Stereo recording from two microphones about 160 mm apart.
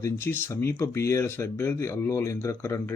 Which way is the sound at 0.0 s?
15° left (ahead or behind).